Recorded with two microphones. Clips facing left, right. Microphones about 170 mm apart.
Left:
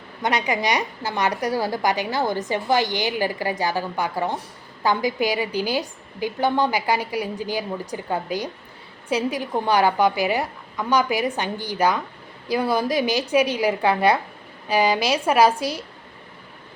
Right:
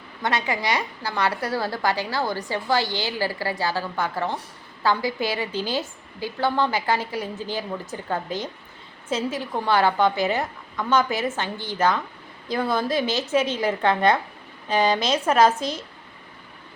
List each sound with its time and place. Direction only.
0.2 s a woman's voice: 20° left (ahead or behind)